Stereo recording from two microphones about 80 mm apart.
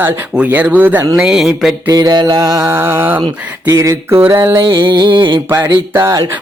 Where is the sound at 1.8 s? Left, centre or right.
Right.